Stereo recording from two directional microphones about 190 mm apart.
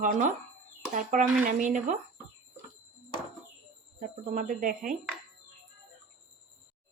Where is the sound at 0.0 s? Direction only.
45° right (ahead or behind).